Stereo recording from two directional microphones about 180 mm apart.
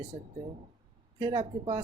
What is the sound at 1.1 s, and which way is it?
Speech, 25° right (ahead or behind).